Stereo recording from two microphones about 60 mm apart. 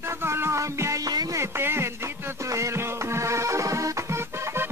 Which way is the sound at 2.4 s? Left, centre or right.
Right.